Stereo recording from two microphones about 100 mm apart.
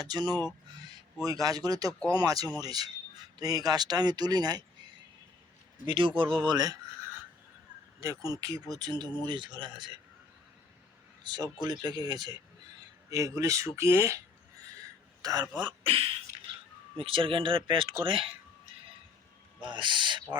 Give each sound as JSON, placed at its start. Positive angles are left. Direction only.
{"t": 0.0, "sound": "a man's voice", "side_deg": -45}
{"t": 2.0, "sound": "speech", "side_deg": 15}
{"t": 2.2, "sound": "speech", "side_deg": -40}
{"t": 5.8, "sound": "speech", "side_deg": -60}
{"t": 8.0, "sound": "speech", "side_deg": -35}
{"t": 11.2, "sound": "speech", "side_deg": -45}
{"t": 15.2, "sound": "speech", "side_deg": -40}
{"t": 15.8, "sound": "speech", "side_deg": -70}
{"t": 19.6, "sound": "speech", "side_deg": -55}